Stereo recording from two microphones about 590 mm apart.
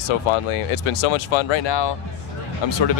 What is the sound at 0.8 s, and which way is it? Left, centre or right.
Speech, left.